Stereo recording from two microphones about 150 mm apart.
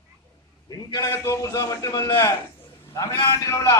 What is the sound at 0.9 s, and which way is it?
Music, 20° left (ahead or behind).